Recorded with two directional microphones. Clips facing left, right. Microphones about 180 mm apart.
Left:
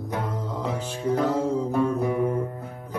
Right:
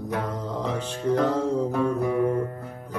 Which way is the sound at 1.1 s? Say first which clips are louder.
Right 1 dB; 10° left (ahead or behind).